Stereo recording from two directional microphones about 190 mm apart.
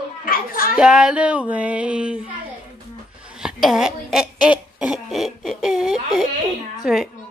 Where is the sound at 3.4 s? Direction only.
Centre (ahead or behind).